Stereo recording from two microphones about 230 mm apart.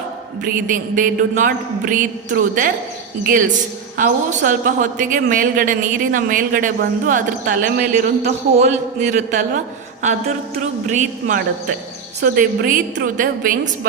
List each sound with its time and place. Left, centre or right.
0.4 s a man's voice: right
3.9 s a man's voice: right
10.8 s a man's voice: right